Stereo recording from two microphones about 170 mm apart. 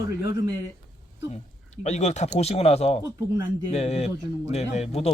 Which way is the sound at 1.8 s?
40° left (ahead or behind).